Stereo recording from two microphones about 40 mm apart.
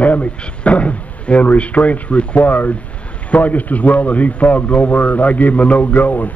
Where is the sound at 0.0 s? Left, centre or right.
Left.